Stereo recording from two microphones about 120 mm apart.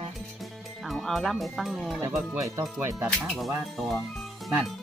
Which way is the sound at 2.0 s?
25° right (ahead or behind).